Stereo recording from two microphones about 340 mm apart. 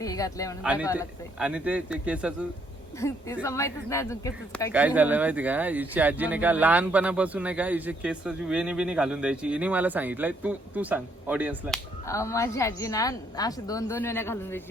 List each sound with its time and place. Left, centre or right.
0.0 s a woman's voice: centre
0.6 s speech: centre
3.0 s a woman's voice: centre
4.7 s speech: centre
12.0 s a woman's voice: centre